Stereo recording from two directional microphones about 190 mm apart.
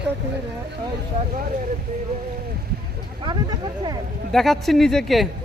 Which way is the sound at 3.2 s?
25° right (ahead or behind).